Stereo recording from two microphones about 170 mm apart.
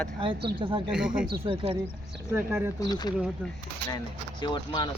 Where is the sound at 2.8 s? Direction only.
25° left (ahead or behind).